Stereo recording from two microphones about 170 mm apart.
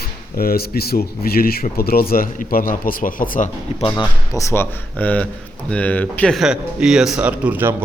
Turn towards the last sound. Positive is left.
turn(degrees=-10)  # may be behind; listen again after turning